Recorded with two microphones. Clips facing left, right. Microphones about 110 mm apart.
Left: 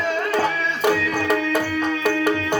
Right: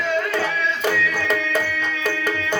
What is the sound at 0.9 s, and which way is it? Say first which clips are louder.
Music: left 1 dB; 40° left (ahead or behind).